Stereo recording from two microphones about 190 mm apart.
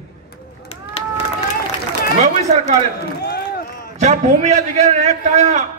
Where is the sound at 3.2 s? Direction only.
55° left (ahead or behind).